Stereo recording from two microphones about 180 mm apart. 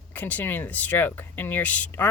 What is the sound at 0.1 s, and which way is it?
Speech, 10° left (ahead or behind).